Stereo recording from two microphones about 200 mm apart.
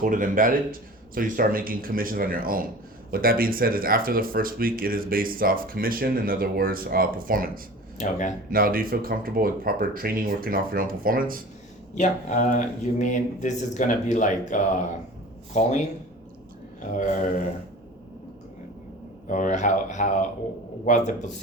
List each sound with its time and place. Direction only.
0.0 s speech: 45° right (ahead or behind)
7.9 s speech: 35° left (ahead or behind)
8.4 s speech: 45° right (ahead or behind)
11.9 s speech: 40° left (ahead or behind)
16.9 s speech: 40° left (ahead or behind)
19.3 s speech: 40° left (ahead or behind)